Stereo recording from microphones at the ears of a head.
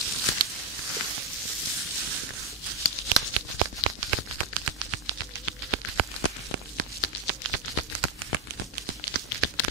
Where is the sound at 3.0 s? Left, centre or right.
Right.